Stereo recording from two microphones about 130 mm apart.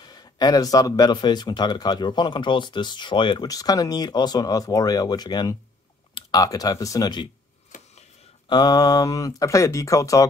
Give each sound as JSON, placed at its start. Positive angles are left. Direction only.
{"t": 0.0, "sound": "speech", "side_deg": 30}
{"t": 7.7, "sound": "a sound", "side_deg": 80}
{"t": 8.5, "sound": "speech", "side_deg": 30}